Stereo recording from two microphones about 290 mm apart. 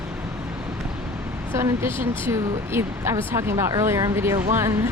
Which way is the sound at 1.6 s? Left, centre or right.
Centre.